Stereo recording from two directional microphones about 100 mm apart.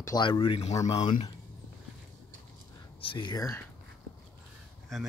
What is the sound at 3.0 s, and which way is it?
Speech, 55° left (ahead or behind).